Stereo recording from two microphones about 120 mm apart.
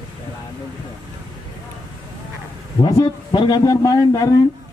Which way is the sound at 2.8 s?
30° left (ahead or behind).